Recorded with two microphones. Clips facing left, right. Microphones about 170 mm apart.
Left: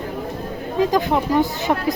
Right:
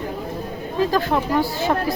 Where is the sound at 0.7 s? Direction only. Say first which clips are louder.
Left 2 dB; 15° left (ahead or behind).